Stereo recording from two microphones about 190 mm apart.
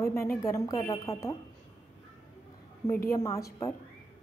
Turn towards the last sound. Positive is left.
turn(degrees=15)  # may be behind; listen again after turning